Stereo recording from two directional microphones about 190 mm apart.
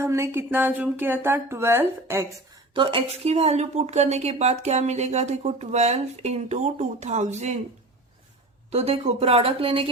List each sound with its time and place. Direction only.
0.0 s speech: 15° right (ahead or behind)
2.7 s a woman's voice: 30° right (ahead or behind)
8.7 s speech: 30° right (ahead or behind)